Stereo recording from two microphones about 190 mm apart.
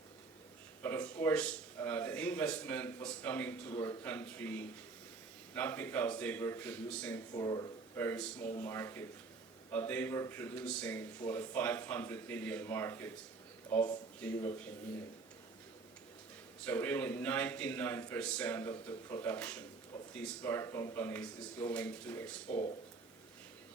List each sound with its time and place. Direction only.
0.8 s speech: 10° left (ahead or behind)
16.6 s speech: 10° left (ahead or behind)
22.4 s speech: 35° left (ahead or behind)